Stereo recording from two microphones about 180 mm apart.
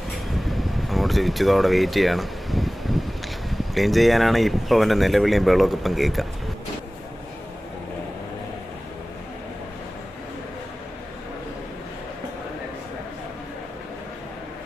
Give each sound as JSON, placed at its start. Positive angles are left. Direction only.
{"t": 0.5, "sound": "air conditioning", "side_deg": 0}
{"t": 3.4, "sound": "speech", "side_deg": 0}